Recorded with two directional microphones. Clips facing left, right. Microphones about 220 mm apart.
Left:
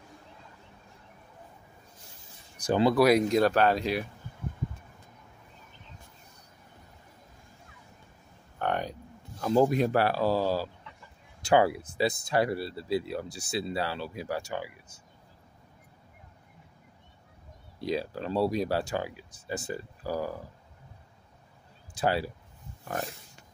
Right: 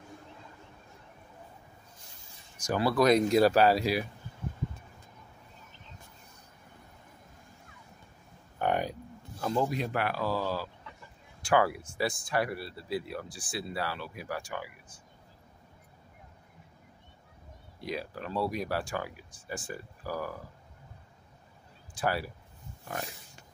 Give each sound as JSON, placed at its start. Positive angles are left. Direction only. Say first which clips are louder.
{"t": 2.5, "sound": "a sound", "louder": "left 4 dB", "side_deg": 30}
{"t": 2.8, "sound": "speech", "louder": "left 3 dB", "side_deg": 15}
{"t": 3.1, "sound": "speech", "louder": "even", "side_deg": 0}
{"t": 8.5, "sound": "a sound", "louder": "right 1 dB", "side_deg": -10}
{"t": 9.4, "sound": "speech", "louder": "left 5 dB", "side_deg": -5}
{"t": 9.9, "sound": "speech", "louder": "left 5 dB", "side_deg": 30}
{"t": 17.8, "sound": "speech", "louder": "left 6 dB", "side_deg": 30}
{"t": 21.9, "sound": "speech", "louder": "left 3 dB", "side_deg": 25}